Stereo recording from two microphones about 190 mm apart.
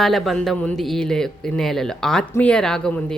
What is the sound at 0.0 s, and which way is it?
Speech, centre (ahead or behind).